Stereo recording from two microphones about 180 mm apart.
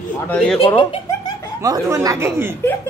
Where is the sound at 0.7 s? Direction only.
25° left (ahead or behind).